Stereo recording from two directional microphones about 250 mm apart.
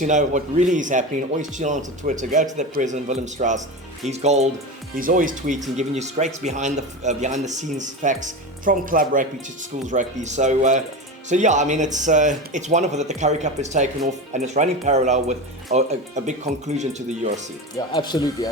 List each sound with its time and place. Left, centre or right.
0.0 s speech: right
17.7 s speech: centre